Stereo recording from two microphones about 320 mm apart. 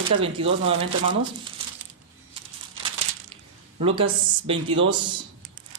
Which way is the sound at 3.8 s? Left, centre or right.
Centre.